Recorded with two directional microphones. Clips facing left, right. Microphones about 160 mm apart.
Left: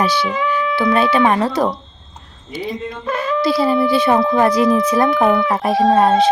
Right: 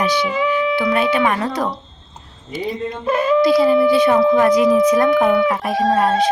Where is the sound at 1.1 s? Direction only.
30° left (ahead or behind).